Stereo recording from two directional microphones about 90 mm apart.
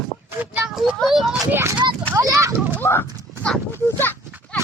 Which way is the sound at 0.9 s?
Centre (ahead or behind).